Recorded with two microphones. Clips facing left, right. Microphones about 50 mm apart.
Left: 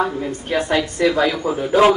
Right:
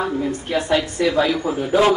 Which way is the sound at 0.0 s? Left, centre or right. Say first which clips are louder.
Left 1 dB; centre.